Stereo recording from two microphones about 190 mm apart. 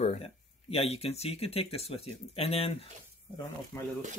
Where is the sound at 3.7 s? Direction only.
15° left (ahead or behind).